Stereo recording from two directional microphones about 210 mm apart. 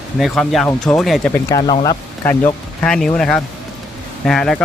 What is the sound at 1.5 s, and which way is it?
Speech, 20° left (ahead or behind).